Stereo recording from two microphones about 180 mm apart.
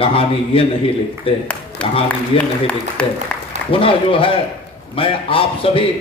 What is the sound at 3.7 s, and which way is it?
A man's voice, 30° left (ahead or behind).